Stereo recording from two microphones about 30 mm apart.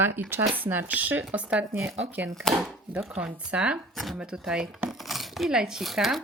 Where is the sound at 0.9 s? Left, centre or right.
Right.